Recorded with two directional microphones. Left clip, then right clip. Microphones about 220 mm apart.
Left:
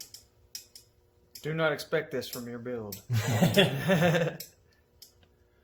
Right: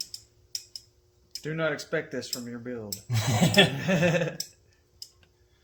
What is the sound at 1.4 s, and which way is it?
Speech, 20° left (ahead or behind).